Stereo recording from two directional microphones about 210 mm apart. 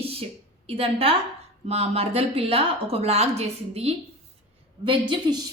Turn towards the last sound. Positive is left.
turn(degrees=-20)  # may be behind; listen again after turning